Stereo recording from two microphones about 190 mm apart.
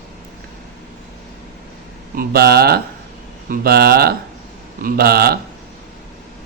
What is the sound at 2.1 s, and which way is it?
Speech, 55° right (ahead or behind).